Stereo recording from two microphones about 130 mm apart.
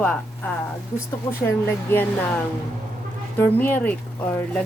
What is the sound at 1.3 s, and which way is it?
Speech, 20° left (ahead or behind).